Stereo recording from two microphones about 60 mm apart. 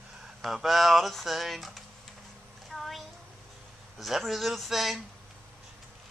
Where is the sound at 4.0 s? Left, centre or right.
Centre.